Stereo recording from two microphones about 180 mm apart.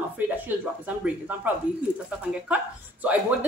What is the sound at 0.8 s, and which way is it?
Speech, 10° right (ahead or behind).